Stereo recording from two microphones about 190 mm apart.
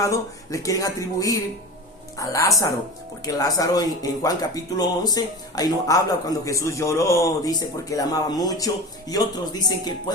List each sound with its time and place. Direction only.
0.0 s speech: 15° left (ahead or behind)